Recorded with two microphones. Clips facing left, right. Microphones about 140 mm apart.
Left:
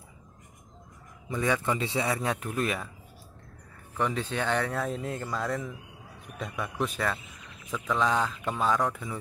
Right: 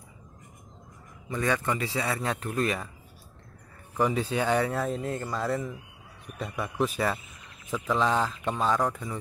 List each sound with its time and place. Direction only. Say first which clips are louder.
1.3 s speech: even; 15° left (ahead or behind)
2.1 s speech: right 1 dB; 5° left (ahead or behind)
4.0 s speech: right 3 dB; 5° right (ahead or behind)